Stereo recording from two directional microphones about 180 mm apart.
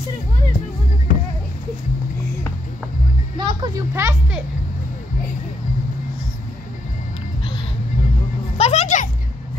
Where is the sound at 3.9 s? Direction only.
15° right (ahead or behind).